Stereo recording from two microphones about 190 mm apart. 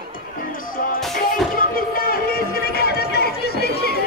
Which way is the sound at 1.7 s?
50° left (ahead or behind).